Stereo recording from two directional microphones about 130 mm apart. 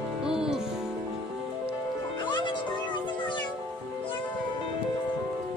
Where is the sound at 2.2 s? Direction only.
35° left (ahead or behind).